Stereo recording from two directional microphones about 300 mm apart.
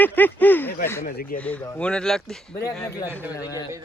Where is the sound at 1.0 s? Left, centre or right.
Left.